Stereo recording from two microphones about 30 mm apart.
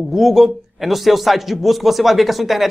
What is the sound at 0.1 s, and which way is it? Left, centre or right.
A man's voice, centre.